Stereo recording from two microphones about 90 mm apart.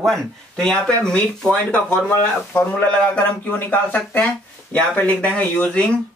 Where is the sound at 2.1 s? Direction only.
20° left (ahead or behind).